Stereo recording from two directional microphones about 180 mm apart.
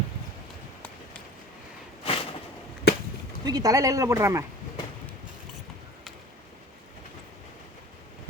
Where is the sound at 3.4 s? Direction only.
20° right (ahead or behind).